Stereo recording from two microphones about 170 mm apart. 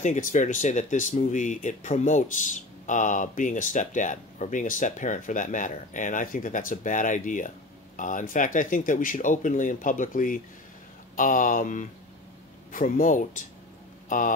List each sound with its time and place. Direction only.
0.0 s speech: 45° left (ahead or behind)